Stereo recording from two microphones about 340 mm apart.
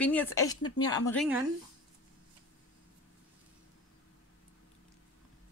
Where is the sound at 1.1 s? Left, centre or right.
Centre.